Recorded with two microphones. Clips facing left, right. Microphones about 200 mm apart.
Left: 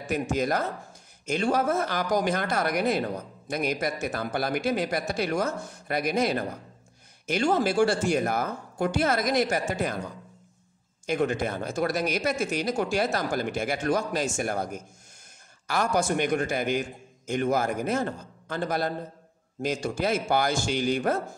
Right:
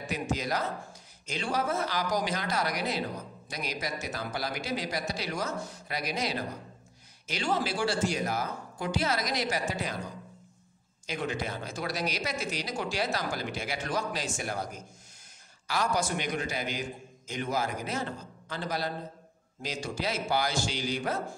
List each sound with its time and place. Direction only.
0.1 s speech: 50° left (ahead or behind)
11.1 s speech: 50° left (ahead or behind)